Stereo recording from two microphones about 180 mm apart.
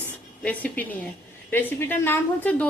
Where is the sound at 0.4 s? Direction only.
10° left (ahead or behind).